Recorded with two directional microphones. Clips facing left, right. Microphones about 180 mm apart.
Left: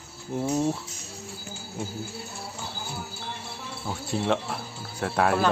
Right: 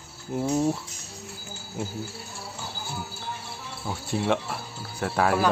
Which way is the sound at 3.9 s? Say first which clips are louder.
Right 1 dB; 5° right (ahead or behind).